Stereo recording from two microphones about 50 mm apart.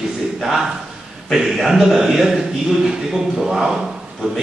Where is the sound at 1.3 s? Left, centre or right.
Centre.